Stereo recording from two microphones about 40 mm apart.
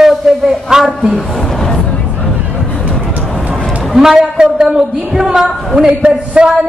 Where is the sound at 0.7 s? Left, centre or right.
Centre.